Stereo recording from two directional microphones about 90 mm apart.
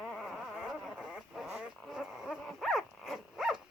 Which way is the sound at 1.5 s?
5° right (ahead or behind).